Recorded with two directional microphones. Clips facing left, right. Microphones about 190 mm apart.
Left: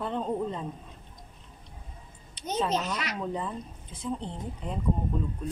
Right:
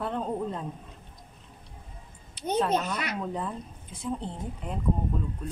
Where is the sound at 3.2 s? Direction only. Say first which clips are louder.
Even; centre (ahead or behind).